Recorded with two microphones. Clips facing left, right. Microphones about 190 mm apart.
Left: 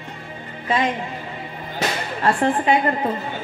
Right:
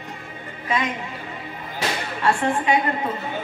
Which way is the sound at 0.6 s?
30° left (ahead or behind).